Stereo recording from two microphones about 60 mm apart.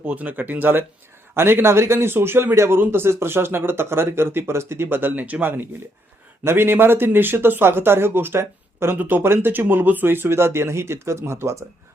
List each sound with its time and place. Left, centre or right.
0.0 s a man's voice: right
9.0 s speech: right
9.2 s speech: right